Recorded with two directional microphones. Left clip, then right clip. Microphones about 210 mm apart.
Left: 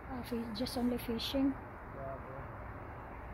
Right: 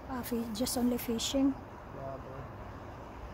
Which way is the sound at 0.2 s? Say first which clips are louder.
Right 3 dB; 20° right (ahead or behind).